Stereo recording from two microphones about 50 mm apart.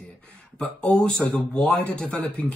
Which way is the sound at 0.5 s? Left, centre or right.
Centre.